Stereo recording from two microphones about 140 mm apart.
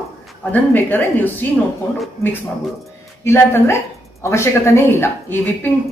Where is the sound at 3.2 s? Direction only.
20° left (ahead or behind).